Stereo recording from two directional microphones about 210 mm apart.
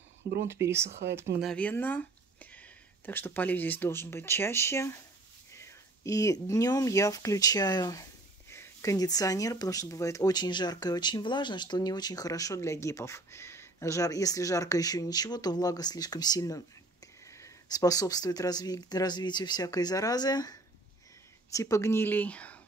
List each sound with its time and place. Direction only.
0.5 s speech: 10° right (ahead or behind)
1.4 s speech: 5° left (ahead or behind)